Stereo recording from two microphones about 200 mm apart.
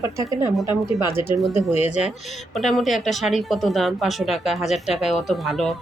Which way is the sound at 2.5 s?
Centre (ahead or behind).